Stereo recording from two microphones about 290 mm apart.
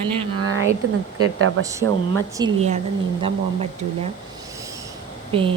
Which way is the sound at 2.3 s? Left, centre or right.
Centre.